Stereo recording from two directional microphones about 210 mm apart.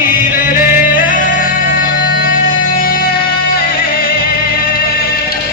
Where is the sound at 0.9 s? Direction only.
40° left (ahead or behind).